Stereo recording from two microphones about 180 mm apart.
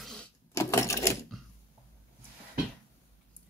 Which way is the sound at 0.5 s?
15° left (ahead or behind).